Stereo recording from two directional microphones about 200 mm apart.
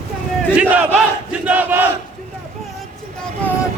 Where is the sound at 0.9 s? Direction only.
5° right (ahead or behind).